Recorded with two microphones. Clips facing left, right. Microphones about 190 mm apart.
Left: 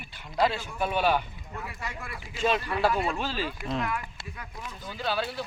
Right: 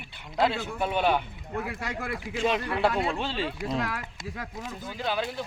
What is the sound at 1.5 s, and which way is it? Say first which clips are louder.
Speech: right 6 dB; 70° right (ahead or behind).